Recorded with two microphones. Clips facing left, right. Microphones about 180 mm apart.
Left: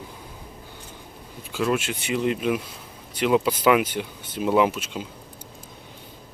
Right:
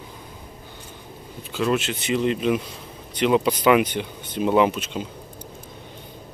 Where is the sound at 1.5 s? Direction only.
10° left (ahead or behind).